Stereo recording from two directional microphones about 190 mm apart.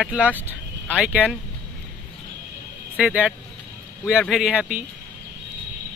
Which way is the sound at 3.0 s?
5° right (ahead or behind).